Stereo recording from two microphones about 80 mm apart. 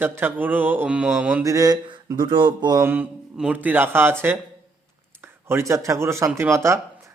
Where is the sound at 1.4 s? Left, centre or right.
Right.